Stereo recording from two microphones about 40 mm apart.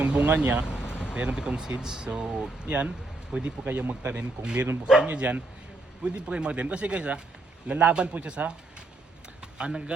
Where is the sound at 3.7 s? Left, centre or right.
Right.